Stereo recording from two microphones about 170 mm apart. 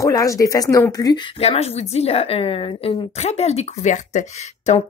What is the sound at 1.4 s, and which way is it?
Speech, 35° left (ahead or behind).